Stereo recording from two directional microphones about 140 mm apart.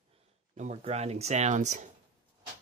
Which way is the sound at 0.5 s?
55° right (ahead or behind).